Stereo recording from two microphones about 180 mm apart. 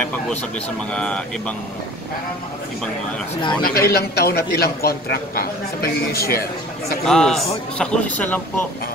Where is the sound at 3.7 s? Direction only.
60° left (ahead or behind).